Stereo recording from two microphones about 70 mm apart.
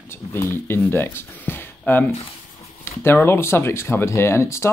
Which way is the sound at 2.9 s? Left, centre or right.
Left.